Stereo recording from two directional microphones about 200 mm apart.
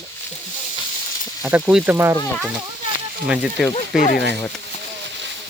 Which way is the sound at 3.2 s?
5° right (ahead or behind).